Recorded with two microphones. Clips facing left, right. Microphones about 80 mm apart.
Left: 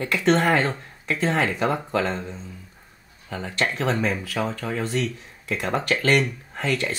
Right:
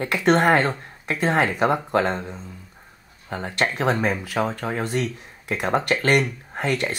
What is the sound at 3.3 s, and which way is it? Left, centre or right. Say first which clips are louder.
Speech: right 2 dB; right.